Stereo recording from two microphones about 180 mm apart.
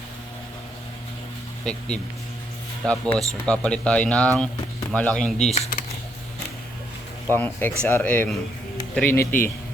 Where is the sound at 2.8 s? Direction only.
5° left (ahead or behind).